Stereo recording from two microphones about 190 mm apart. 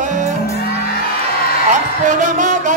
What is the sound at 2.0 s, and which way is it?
Music, 40° right (ahead or behind).